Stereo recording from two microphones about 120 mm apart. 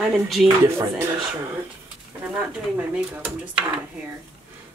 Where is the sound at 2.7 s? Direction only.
15° right (ahead or behind).